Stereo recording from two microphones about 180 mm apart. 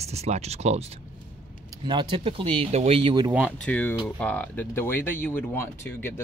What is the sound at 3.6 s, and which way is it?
Speech, 5° left (ahead or behind).